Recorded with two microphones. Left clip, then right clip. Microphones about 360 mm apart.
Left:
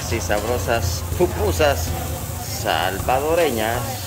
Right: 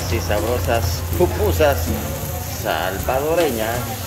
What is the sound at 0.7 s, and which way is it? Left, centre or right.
Speech, centre.